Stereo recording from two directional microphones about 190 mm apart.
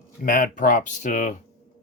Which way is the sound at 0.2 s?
45° left (ahead or behind).